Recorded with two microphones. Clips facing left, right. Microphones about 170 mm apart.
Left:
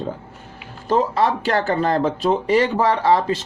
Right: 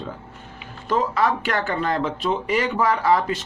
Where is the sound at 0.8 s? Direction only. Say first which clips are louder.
Left 3 dB; 30° left (ahead or behind).